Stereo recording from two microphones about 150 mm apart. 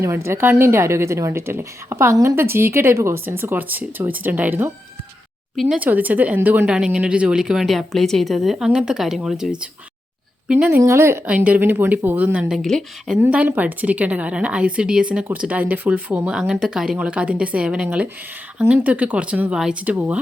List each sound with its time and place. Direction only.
0.0 s a woman's voice: 15° right (ahead or behind); by 13.1 s centre (ahead or behind)
13.1 s a woman's voice: 10° right (ahead or behind)